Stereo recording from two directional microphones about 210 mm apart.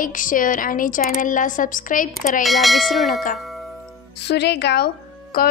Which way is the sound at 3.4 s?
Centre (ahead or behind).